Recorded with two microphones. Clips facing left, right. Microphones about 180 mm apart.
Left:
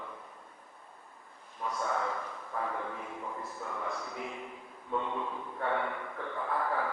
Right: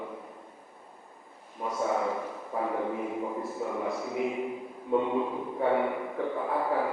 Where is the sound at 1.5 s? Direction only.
20° right (ahead or behind).